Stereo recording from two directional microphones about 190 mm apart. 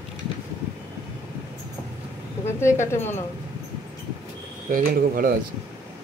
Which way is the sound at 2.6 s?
15° left (ahead or behind).